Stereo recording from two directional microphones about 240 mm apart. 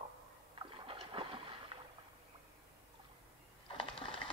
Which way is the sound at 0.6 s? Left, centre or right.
Right.